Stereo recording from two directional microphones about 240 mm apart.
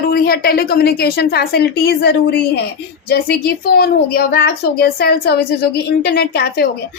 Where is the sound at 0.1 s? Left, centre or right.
Left.